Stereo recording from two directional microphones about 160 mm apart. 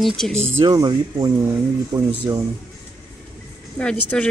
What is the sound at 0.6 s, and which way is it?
Speech, 25° right (ahead or behind).